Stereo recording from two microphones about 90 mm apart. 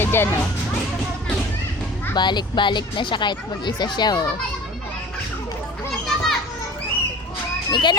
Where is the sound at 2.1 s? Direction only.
55° left (ahead or behind).